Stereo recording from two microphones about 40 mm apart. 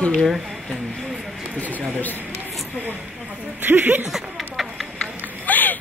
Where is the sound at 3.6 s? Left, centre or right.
Right.